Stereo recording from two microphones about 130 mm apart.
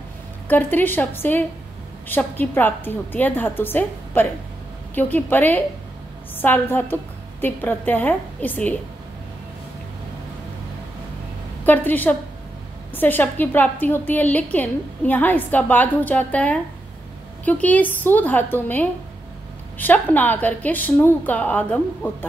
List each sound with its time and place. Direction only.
0.5 s a woman's voice: 15° left (ahead or behind)
11.6 s a woman's voice: 15° left (ahead or behind)